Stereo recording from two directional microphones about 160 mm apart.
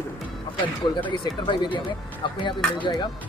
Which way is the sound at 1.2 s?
30° left (ahead or behind).